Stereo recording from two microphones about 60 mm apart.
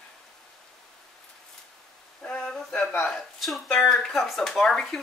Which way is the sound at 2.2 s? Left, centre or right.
Centre.